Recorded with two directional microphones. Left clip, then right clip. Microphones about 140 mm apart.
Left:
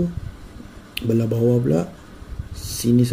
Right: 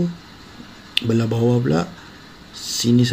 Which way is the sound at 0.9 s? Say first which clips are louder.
Right 2 dB; 10° right (ahead or behind).